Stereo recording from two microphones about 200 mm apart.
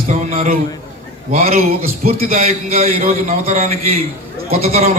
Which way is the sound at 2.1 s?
35° right (ahead or behind).